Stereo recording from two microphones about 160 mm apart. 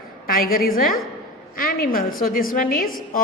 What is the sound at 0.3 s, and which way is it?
A woman's voice, 65° left (ahead or behind).